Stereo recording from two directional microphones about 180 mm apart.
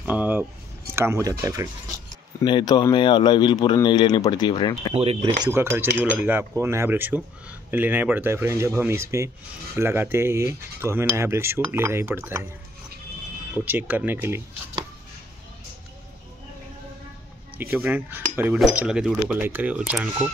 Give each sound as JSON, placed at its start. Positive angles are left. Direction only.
{"t": 0.0, "sound": "a sound", "side_deg": -10}
{"t": 0.9, "sound": "cutlery", "side_deg": -15}
{"t": 2.4, "sound": "a man's voice", "side_deg": 25}
{"t": 4.9, "sound": "speech", "side_deg": -30}
{"t": 5.4, "sound": "cutlery", "side_deg": -15}
{"t": 13.7, "sound": "cutlery", "side_deg": -10}
{"t": 17.6, "sound": "cutlery", "side_deg": -10}